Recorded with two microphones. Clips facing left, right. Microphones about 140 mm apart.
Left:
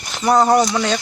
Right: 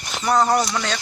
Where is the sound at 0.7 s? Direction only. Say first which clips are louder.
Left 6 dB; 15° left (ahead or behind).